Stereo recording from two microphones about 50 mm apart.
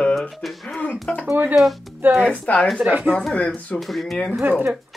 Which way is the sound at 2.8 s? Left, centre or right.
Right.